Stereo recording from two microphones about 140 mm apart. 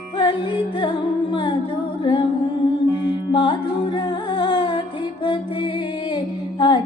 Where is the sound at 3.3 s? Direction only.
35° left (ahead or behind).